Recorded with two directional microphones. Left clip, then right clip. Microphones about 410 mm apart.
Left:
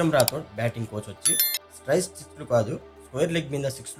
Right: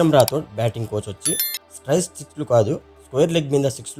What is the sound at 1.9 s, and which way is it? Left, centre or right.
Speech, centre.